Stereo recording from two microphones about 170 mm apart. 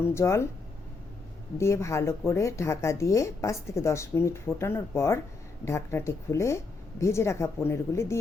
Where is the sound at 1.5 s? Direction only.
15° left (ahead or behind).